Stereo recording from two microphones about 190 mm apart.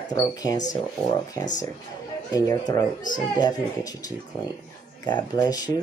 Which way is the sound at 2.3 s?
20° left (ahead or behind).